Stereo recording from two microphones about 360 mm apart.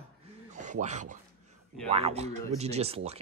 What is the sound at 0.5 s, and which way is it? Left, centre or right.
Speech, centre.